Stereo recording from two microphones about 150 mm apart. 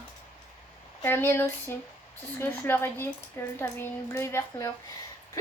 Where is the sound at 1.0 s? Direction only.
15° left (ahead or behind).